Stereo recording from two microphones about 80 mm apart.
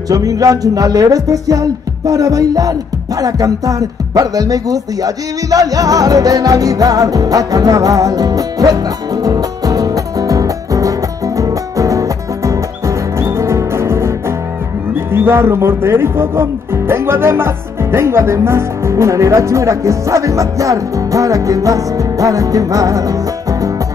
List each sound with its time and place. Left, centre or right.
0.1 s speech: right
3.2 s music: right
15.1 s speech: right